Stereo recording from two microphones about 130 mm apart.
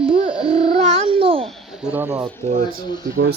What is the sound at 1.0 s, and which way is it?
Speech, 45° right (ahead or behind).